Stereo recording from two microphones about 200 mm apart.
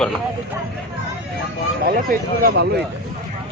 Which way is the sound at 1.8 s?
45° right (ahead or behind).